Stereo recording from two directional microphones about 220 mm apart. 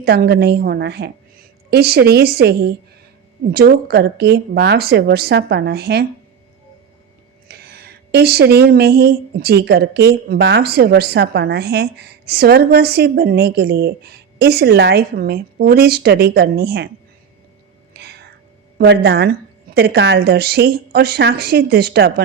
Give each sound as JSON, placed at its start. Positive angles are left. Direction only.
{"t": 0.0, "sound": "speech", "side_deg": -45}
{"t": 7.4, "sound": "speech", "side_deg": -45}
{"t": 17.9, "sound": "whispering", "side_deg": -50}
{"t": 18.8, "sound": "speech", "side_deg": -50}